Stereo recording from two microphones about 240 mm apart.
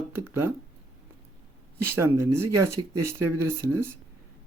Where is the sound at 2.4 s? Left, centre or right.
Centre.